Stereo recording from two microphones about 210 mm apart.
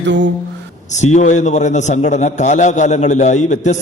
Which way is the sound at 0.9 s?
35° left (ahead or behind).